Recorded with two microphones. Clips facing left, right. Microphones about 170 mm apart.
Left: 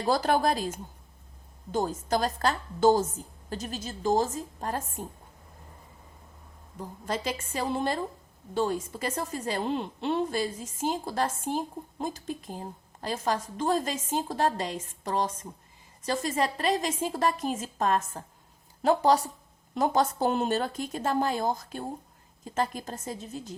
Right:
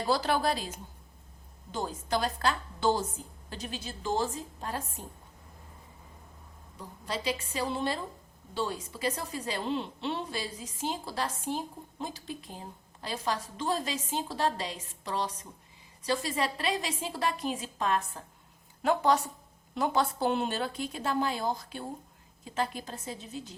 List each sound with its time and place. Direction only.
0.1 s a woman's voice: 45° left (ahead or behind)
6.7 s a woman's voice: 45° left (ahead or behind)